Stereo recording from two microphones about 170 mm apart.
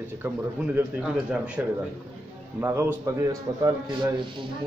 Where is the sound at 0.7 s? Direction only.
10° right (ahead or behind).